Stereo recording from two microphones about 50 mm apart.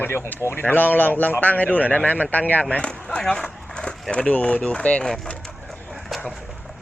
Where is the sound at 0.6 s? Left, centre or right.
Left.